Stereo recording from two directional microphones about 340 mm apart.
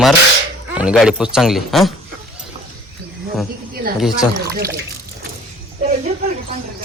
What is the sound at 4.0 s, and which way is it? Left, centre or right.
Speech, centre.